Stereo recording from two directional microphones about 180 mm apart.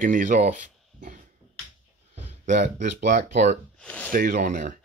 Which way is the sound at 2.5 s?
45° right (ahead or behind).